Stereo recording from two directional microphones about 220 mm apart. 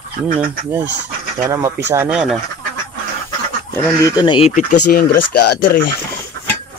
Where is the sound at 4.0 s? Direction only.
20° left (ahead or behind).